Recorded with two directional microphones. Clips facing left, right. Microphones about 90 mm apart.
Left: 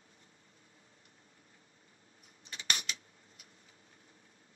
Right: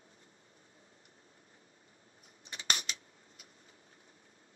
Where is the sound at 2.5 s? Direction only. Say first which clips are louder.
Right 1 dB; 35° right (ahead or behind).